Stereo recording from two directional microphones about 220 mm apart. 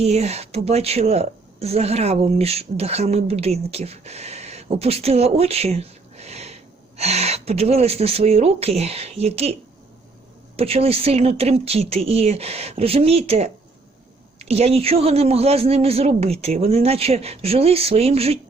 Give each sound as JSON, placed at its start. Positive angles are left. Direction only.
{"t": 0.0, "sound": "a woman's voice", "side_deg": -30}
{"t": 10.6, "sound": "a woman's voice", "side_deg": -25}